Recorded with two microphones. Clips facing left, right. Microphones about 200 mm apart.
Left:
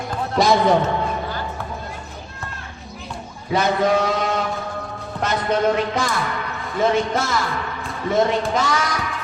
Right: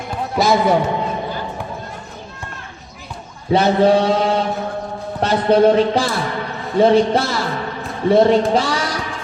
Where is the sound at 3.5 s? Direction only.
30° right (ahead or behind).